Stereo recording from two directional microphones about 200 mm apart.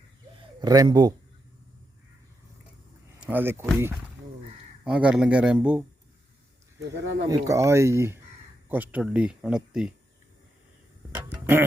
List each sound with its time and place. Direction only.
0.6 s speech: 20° right (ahead or behind)
3.2 s speech: 10° right (ahead or behind)
4.8 s speech: 5° right (ahead or behind)
6.9 s speech: 60° right (ahead or behind)
7.3 s speech: 15° right (ahead or behind)
11.1 s tick-tock: 10° right (ahead or behind)